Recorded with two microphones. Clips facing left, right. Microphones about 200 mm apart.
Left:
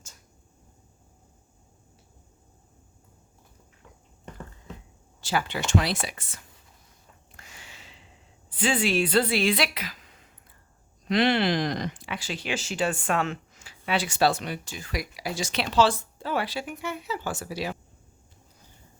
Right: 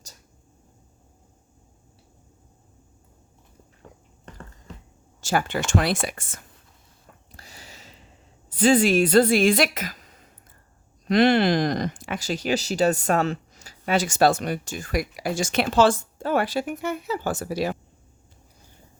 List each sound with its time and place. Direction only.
3.9 s walk: 40° right (ahead or behind)
5.2 s speech: 50° right (ahead or behind)
7.3 s a sound: 35° right (ahead or behind)
8.4 s a woman's voice: 40° right (ahead or behind)